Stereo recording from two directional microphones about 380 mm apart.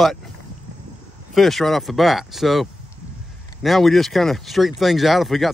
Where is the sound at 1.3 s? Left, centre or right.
Centre.